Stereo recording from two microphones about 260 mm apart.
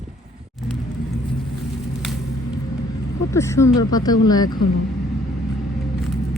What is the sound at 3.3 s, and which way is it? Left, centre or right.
Speech, centre.